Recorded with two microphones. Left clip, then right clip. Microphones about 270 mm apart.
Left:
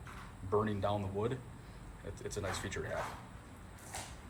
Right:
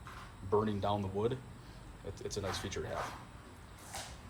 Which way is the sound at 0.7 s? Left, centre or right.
Centre.